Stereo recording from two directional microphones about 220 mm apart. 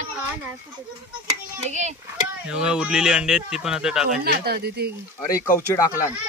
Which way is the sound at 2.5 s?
5° right (ahead or behind).